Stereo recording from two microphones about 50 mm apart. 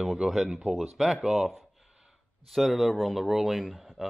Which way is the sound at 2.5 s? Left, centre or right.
Centre.